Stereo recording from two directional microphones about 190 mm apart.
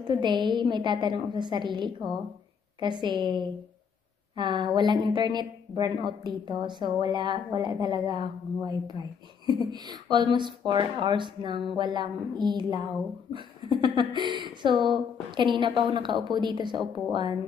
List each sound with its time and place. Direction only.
0.0 s speech: 25° right (ahead or behind)